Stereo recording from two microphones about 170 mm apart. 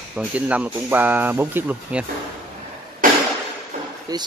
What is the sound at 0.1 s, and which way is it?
Speech, 10° right (ahead or behind).